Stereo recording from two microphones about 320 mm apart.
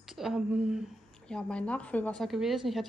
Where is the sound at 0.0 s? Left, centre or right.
Centre.